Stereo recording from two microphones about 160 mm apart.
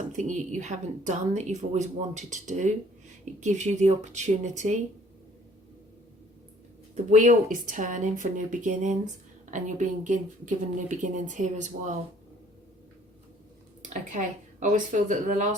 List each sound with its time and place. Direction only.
0.2 s a woman's voice: 50° right (ahead or behind)
6.9 s a woman's voice: 50° right (ahead or behind)
13.9 s a woman's voice: 50° right (ahead or behind)